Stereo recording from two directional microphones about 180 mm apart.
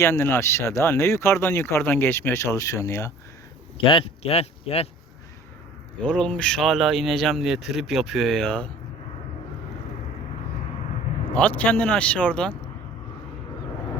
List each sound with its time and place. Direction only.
0.0 s speech: 15° left (ahead or behind)
3.8 s speech: 30° left (ahead or behind)
6.0 s speech: 5° left (ahead or behind)
11.3 s speech: 10° left (ahead or behind)